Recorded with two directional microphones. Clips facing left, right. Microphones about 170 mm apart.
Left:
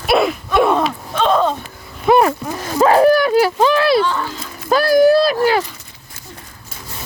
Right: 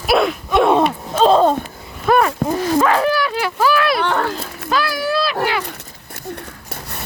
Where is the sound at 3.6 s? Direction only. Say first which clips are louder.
Left 3 dB; 30° left (ahead or behind).